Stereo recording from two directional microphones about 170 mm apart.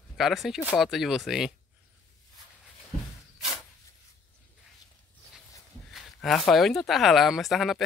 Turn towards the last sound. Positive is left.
turn(degrees=0)  # may be behind; listen again after turning